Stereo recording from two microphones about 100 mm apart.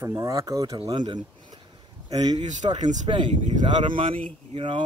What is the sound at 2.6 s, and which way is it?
Speech, 60° right (ahead or behind).